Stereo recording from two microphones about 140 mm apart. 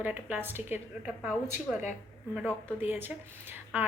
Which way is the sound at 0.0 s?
10° right (ahead or behind).